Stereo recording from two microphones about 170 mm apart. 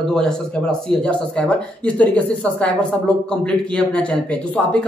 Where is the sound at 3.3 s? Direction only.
5° left (ahead or behind).